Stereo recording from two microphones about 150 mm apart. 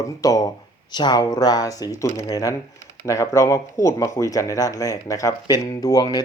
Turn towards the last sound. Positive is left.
turn(degrees=25)  # may be behind; listen again after turning